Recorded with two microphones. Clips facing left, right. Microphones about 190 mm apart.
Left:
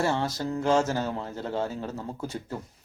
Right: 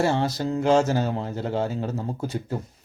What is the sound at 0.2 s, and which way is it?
Speech, 15° right (ahead or behind).